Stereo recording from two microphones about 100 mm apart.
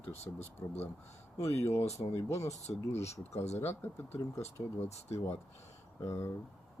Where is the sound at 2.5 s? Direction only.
90° left.